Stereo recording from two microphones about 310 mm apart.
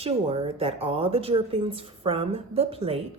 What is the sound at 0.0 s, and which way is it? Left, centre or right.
A woman's voice, centre.